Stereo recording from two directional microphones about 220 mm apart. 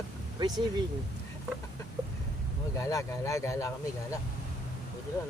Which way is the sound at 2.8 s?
15° left (ahead or behind).